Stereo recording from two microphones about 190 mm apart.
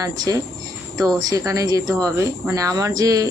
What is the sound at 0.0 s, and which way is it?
Speech, 20° right (ahead or behind).